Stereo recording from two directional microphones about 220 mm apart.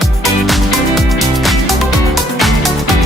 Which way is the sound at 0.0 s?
Centre (ahead or behind).